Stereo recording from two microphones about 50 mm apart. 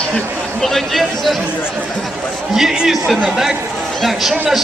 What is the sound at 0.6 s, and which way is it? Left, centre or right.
Speech, centre.